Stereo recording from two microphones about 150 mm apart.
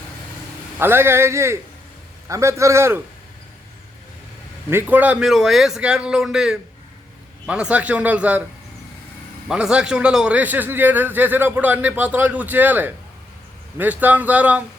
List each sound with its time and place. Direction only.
0.8 s a man's voice: 15° right (ahead or behind)
4.7 s a man's voice: 15° right (ahead or behind)
9.5 s a man's voice: 5° right (ahead or behind)